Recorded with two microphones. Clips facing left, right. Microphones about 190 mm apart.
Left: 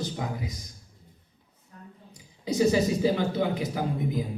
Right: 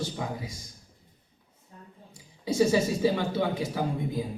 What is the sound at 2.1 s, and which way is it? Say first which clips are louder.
A man's voice: right 1 dB; 20° left (ahead or behind).